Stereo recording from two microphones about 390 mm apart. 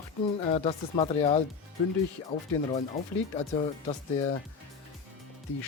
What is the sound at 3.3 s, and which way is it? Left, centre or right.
Speech, centre.